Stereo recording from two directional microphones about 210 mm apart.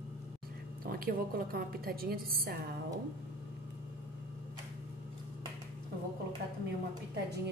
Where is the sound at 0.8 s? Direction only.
45° right (ahead or behind).